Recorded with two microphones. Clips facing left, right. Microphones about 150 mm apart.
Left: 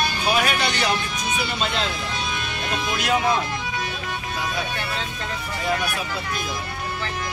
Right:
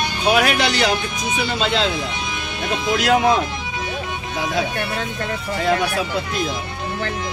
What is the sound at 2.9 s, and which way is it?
Speech, 90° right.